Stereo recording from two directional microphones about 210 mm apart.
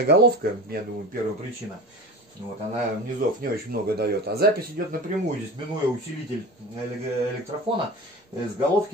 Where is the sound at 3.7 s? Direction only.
50° right (ahead or behind).